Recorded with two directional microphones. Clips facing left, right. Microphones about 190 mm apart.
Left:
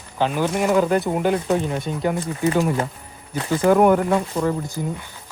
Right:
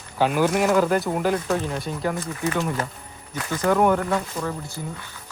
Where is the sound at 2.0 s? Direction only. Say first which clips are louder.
Left 5 dB; 30° left (ahead or behind).